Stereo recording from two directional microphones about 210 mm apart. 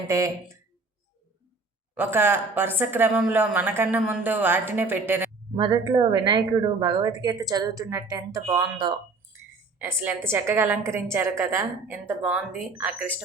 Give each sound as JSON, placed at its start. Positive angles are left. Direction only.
{"t": 0.1, "sound": "a woman's voice", "side_deg": -15}
{"t": 2.0, "sound": "a woman's voice", "side_deg": -10}
{"t": 5.5, "sound": "a woman's voice", "side_deg": -20}